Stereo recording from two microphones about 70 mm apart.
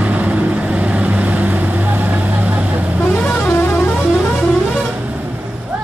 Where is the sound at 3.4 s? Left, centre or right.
Left.